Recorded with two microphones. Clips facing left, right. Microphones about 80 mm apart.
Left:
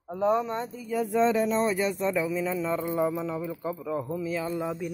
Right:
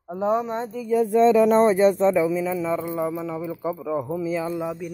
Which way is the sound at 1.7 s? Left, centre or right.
Right.